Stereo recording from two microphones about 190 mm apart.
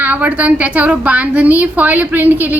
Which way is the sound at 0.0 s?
10° right (ahead or behind).